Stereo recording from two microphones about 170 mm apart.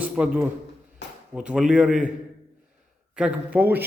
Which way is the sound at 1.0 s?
90° left.